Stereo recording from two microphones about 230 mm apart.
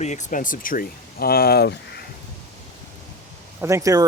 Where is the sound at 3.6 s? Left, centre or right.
Centre.